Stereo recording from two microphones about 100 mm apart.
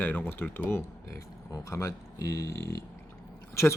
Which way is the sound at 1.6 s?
35° left (ahead or behind).